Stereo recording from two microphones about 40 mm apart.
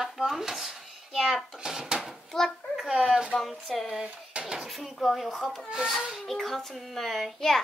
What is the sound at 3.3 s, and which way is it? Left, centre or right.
A woman's voice, centre.